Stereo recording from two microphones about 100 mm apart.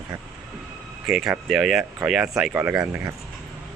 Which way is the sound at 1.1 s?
5° right (ahead or behind).